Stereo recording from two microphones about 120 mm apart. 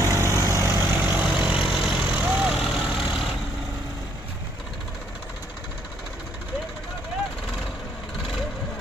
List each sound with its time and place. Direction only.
0.0 s vehicle: 25° right (ahead or behind)
1.2 s vehicle: 5° right (ahead or behind)